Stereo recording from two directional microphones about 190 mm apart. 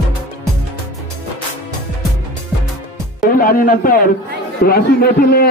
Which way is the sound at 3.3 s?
50° left (ahead or behind).